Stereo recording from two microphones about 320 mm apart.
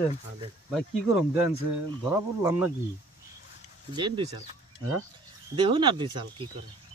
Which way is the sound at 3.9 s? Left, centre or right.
Centre.